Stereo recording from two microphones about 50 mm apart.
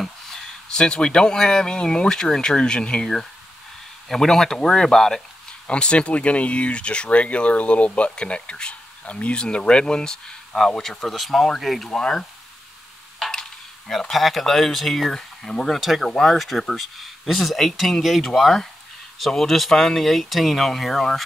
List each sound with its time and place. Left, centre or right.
0.0 s speech: centre
4.1 s speech: centre
5.7 s speech: left